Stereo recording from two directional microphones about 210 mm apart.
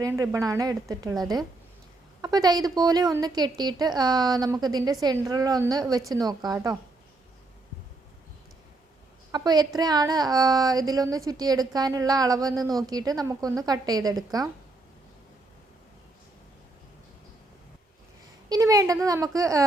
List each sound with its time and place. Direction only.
0.0 s a woman's voice: 10° right (ahead or behind)
2.2 s a woman's voice: 20° right (ahead or behind)
9.3 s a woman's voice: 20° right (ahead or behind)
18.4 s a woman's voice: 15° right (ahead or behind)